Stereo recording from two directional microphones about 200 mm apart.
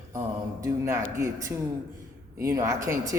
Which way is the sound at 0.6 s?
15° right (ahead or behind).